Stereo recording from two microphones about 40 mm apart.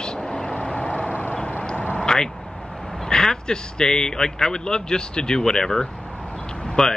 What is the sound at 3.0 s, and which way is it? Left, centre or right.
Speech, centre.